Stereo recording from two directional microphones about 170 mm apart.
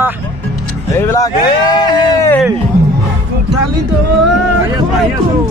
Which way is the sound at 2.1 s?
15° left (ahead or behind).